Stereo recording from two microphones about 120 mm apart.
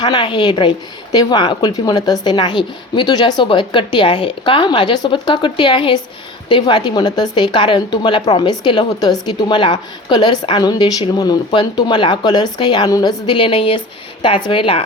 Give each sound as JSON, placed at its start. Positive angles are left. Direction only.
{"t": 0.0, "sound": "a woman's voice", "side_deg": 40}